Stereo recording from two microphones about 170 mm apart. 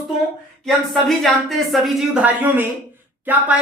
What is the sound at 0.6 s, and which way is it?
A woman's voice, centre (ahead or behind).